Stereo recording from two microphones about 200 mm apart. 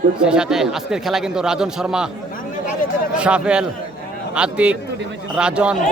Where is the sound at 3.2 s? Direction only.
5° right (ahead or behind).